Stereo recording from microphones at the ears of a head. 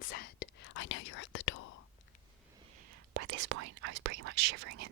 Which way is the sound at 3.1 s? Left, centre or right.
Right.